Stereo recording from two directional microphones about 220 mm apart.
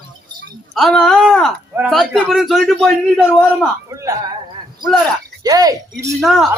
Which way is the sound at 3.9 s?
15° right (ahead or behind).